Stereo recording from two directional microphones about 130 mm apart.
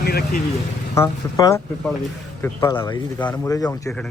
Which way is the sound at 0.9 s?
25° left (ahead or behind).